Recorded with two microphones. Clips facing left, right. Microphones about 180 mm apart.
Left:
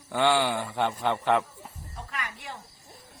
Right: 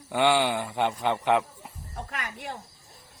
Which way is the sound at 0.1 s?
15° right (ahead or behind).